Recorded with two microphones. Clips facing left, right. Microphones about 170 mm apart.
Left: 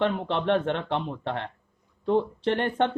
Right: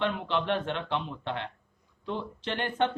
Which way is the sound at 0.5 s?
60° left (ahead or behind).